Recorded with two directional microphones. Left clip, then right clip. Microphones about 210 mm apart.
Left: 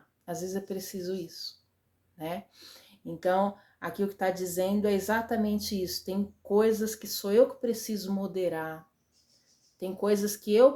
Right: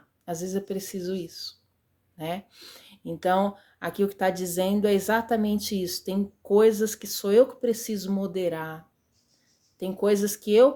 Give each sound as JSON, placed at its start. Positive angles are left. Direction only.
{"t": 0.3, "sound": "speech", "side_deg": -35}